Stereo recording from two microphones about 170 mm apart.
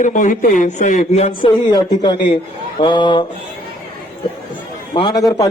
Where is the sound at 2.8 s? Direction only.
25° left (ahead or behind).